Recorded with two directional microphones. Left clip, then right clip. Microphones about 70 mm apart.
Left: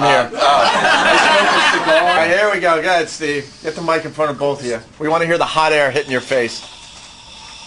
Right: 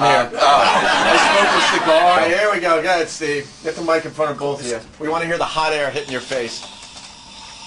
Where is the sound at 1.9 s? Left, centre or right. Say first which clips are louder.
Left 1 dB; left.